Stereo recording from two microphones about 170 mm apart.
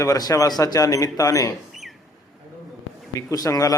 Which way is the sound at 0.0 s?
20° left (ahead or behind).